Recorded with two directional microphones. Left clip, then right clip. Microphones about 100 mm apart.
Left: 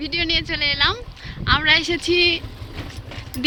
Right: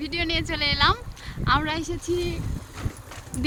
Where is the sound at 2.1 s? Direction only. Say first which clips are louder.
Left 11 dB; 45° left (ahead or behind).